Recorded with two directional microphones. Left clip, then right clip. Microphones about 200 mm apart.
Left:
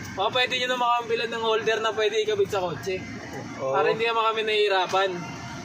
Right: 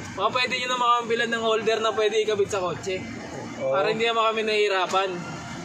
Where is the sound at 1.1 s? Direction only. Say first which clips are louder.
Right 1 dB; centre (ahead or behind).